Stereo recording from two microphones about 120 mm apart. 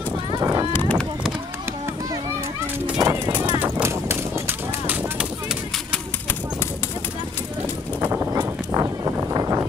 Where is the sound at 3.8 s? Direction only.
20° right (ahead or behind).